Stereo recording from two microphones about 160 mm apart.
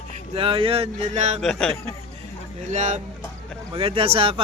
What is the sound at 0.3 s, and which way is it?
Speech, 35° right (ahead or behind).